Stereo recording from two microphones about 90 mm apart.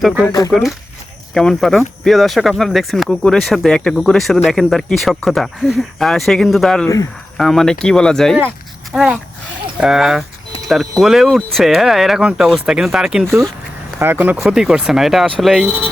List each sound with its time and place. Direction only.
0.3 s speech: 45° left (ahead or behind)
1.3 s speech: 5° left (ahead or behind)
8.9 s speech: 10° right (ahead or behind)
14.0 s speech: 20° right (ahead or behind)
14.4 s speech: 5° right (ahead or behind)